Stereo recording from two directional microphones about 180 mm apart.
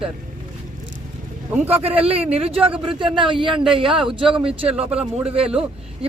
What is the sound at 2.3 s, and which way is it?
A man's voice, 30° right (ahead or behind).